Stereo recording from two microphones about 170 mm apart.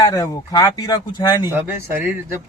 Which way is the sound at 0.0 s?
20° left (ahead or behind).